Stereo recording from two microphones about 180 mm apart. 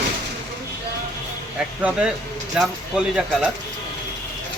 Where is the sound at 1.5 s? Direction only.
5° right (ahead or behind).